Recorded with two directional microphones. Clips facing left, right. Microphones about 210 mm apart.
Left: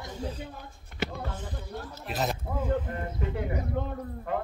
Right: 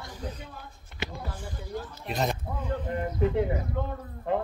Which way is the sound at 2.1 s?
Centre (ahead or behind).